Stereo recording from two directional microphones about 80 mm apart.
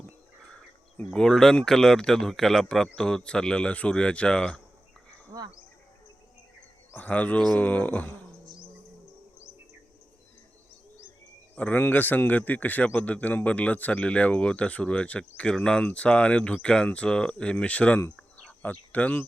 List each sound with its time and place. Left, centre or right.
0.9 s a man's voice: centre
6.9 s speech: centre
11.5 s a man's voice: centre